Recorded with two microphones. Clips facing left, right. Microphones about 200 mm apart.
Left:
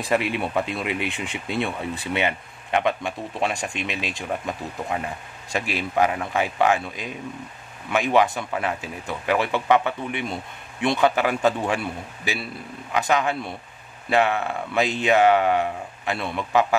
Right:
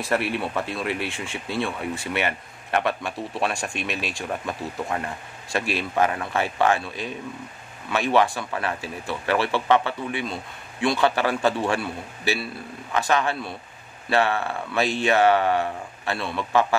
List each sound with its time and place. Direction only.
0.0 s speech: 15° left (ahead or behind)